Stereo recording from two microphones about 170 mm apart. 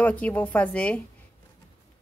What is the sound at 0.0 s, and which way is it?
Speech, 10° left (ahead or behind).